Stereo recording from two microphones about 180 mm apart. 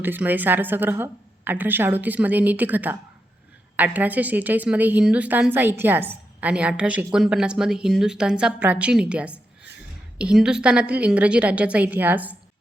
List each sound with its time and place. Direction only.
0.0 s a woman's voice: 10° right (ahead or behind)